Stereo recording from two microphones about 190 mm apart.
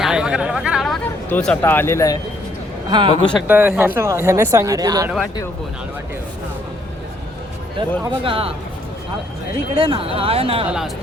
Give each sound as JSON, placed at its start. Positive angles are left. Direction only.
{"t": 0.0, "sound": "chatter", "side_deg": -5}
{"t": 2.9, "sound": "speech", "side_deg": -25}
{"t": 3.4, "sound": "speech", "side_deg": -10}
{"t": 8.0, "sound": "speech", "side_deg": -30}
{"t": 9.7, "sound": "speech", "side_deg": -30}
{"t": 10.7, "sound": "speech", "side_deg": 0}